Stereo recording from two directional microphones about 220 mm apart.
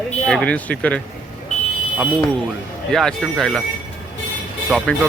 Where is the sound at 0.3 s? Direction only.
5° left (ahead or behind).